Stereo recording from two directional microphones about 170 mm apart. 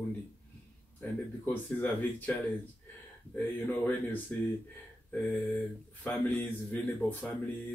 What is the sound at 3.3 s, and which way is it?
Speech, 10° left (ahead or behind).